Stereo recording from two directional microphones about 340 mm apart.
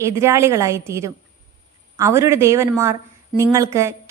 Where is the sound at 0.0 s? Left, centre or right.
Centre.